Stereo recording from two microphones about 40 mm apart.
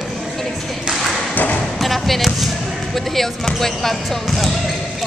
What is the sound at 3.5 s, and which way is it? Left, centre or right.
Speech, centre.